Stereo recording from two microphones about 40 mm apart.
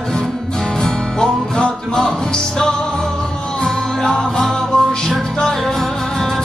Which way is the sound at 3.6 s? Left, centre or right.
Centre.